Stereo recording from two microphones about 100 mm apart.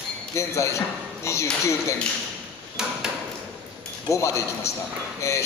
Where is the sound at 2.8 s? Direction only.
5° right (ahead or behind).